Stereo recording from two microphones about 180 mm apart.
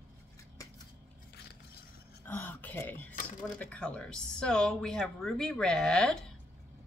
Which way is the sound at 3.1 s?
45° left (ahead or behind).